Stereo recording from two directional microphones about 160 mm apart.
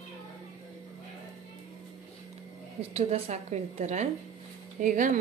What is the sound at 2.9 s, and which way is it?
A woman's voice, 40° right (ahead or behind).